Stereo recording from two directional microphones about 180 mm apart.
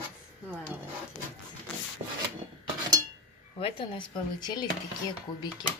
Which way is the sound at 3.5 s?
30° left (ahead or behind).